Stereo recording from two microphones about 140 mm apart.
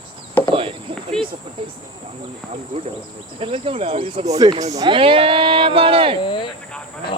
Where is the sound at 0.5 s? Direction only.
40° right (ahead or behind).